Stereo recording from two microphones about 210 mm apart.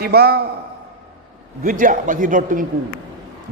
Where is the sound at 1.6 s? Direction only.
40° right (ahead or behind).